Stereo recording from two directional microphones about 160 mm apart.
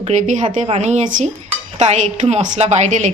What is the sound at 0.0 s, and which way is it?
A woman's voice, 50° right (ahead or behind).